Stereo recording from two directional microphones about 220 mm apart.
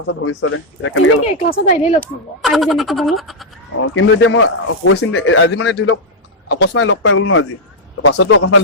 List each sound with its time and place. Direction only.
0.1 s speech: 70° left (ahead or behind)
1.5 s speech: 35° left (ahead or behind)
2.4 s speech: centre (ahead or behind)
3.8 s speech: 65° left (ahead or behind)